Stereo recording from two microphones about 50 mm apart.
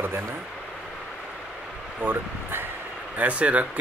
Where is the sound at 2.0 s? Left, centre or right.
Right.